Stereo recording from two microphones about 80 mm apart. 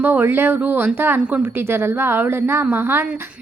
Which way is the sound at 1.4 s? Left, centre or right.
Right.